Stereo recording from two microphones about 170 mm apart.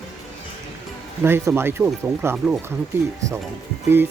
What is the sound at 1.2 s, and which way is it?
Speech, 15° right (ahead or behind).